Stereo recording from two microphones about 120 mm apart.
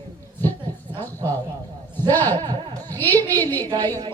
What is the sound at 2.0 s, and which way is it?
Speech, 15° left (ahead or behind).